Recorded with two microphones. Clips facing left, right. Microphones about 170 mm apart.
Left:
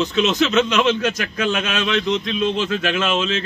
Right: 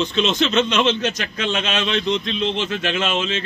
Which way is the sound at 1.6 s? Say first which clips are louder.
Left 1 dB; 30° right (ahead or behind).